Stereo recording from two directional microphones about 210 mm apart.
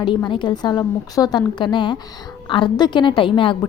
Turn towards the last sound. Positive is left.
turn(degrees=25)  # may be behind; listen again after turning